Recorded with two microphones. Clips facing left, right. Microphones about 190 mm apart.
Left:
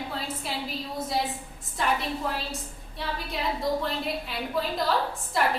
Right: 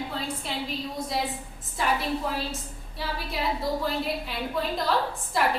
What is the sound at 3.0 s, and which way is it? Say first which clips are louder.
A woman's voice: right 1 dB; centre (ahead or behind).